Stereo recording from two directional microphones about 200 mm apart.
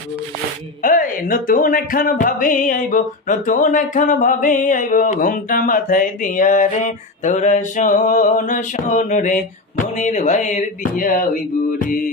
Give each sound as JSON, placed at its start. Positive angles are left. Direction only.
{"t": 0.8, "sound": "speech", "side_deg": 45}